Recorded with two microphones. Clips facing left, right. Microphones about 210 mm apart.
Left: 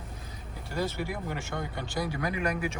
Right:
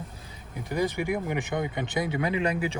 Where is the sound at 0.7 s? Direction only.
15° right (ahead or behind).